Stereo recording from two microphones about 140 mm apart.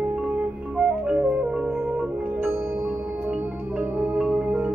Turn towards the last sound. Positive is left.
turn(degrees=-10)  # may be behind; listen again after turning